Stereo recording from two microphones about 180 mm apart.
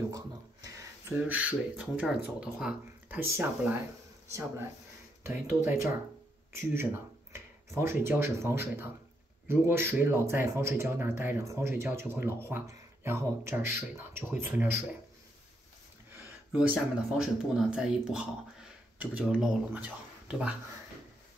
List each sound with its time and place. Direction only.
0.7 s speech: 15° right (ahead or behind)
16.5 s speech: centre (ahead or behind)